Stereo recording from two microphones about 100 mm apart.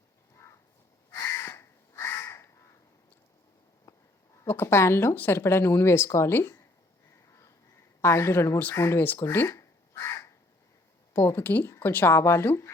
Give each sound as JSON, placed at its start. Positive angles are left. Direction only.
{"t": 1.1, "sound": "crow", "side_deg": 30}
{"t": 3.9, "sound": "a sound", "side_deg": 35}
{"t": 4.4, "sound": "speech", "side_deg": 25}
{"t": 7.1, "sound": "a sound", "side_deg": 30}
{"t": 8.8, "sound": "crow", "side_deg": 25}
{"t": 11.1, "sound": "speech", "side_deg": 25}